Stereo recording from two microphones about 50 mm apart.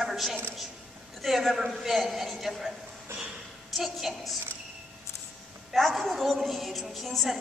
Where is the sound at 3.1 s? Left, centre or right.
Right.